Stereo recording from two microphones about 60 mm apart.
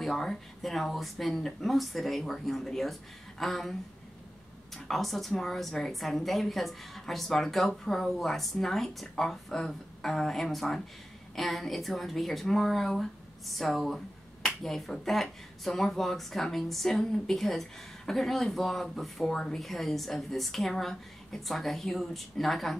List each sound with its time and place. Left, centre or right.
0.0 s speech: centre
4.8 s speech: centre